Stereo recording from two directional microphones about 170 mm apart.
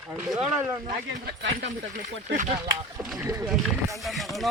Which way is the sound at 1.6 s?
45° right (ahead or behind).